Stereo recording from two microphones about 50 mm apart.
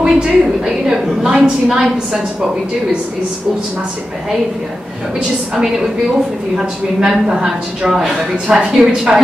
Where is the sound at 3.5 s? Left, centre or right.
Centre.